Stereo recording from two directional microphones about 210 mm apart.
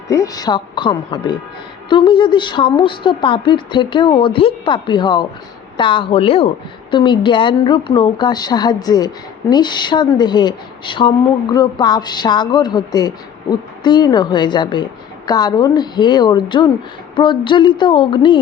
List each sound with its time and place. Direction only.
0.1 s speech: 15° left (ahead or behind)